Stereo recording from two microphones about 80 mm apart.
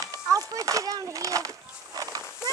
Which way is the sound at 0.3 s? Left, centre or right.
Right.